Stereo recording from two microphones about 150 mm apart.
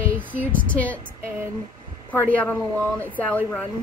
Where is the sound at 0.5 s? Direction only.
10° left (ahead or behind).